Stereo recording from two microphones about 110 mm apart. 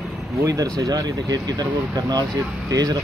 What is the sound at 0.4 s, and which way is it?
Speech, 30° right (ahead or behind).